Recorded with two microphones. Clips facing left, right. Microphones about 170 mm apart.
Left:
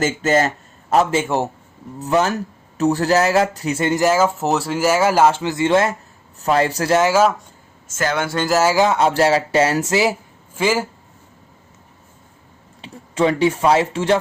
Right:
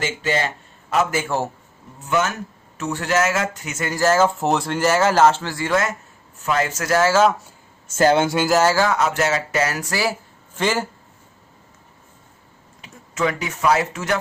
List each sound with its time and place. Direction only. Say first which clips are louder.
0.0 s speech: left 6 dB; 45° left (ahead or behind)
1.1 s speech: left 4 dB; 20° left (ahead or behind)
2.0 s speech: left 4 dB; 35° left (ahead or behind)
4.0 s speech: right 2 dB; 10° left (ahead or behind); by 7.0 s 30° left (ahead or behind)
7.0 s speech: even; 10° left (ahead or behind)
7.9 s speech: right 5 dB; 30° right (ahead or behind)
8.4 s speech: left 2 dB; 5° left (ahead or behind)
8.7 s speech: left 4 dB; 20° left (ahead or behind)
10.5 s a man's voice: left 3 dB; 10° left (ahead or behind)
12.8 s speech: left 5 dB; 30° left (ahead or behind)